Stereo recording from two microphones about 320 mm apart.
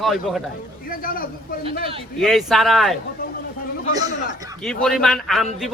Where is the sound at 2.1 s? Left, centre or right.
Centre.